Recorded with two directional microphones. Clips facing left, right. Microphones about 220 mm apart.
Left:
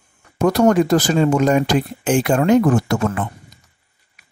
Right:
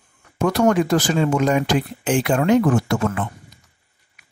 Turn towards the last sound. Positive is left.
turn(degrees=40)  # may be behind; listen again after turning